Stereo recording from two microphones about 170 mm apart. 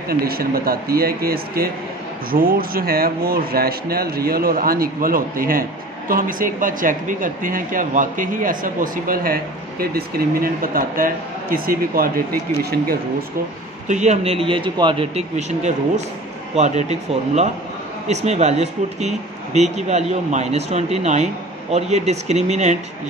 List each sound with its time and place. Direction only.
0.1 s speech: 60° right (ahead or behind)
13.8 s speech: 45° right (ahead or behind)
18.0 s speech: 40° right (ahead or behind)